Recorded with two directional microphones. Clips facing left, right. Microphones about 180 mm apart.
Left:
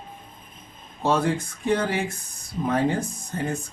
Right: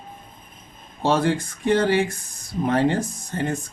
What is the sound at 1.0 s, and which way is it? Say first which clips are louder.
Speech: right 2 dB; 90° right.